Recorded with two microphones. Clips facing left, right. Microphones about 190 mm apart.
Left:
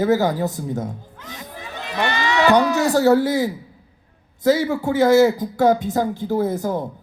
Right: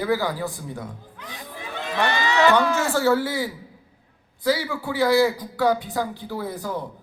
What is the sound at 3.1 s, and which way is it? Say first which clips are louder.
Speech: left 6 dB; 20° left (ahead or behind).